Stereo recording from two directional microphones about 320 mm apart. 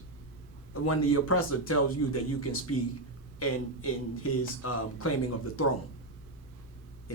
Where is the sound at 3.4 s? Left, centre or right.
Left.